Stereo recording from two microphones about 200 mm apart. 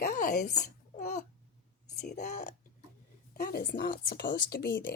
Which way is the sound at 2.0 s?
35° left (ahead or behind).